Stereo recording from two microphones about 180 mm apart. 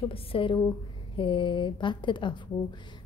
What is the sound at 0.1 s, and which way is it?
A woman's voice, 30° left (ahead or behind).